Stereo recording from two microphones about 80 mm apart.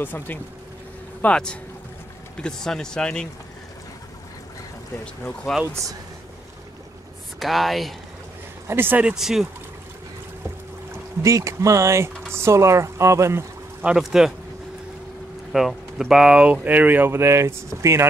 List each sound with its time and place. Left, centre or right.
0.0 s speech: left
1.2 s speech: centre
7.3 s speech: centre
8.6 s speech: right
9.0 s speech: centre
11.2 s speech: right
13.8 s speech: centre
15.5 s speech: centre
16.6 s speech: right